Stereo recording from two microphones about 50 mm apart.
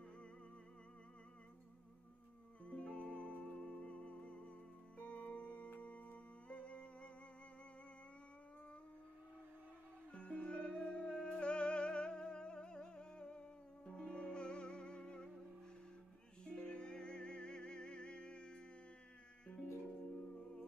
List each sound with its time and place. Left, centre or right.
2.6 s music: left
10.1 s music: left
16.4 s music: centre